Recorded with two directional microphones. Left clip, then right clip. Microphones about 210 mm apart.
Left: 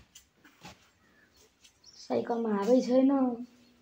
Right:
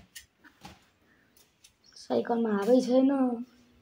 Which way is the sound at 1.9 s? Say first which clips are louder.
Right 2 dB; 15° right (ahead or behind).